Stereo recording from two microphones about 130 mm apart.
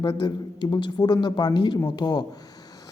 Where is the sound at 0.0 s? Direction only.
35° left (ahead or behind).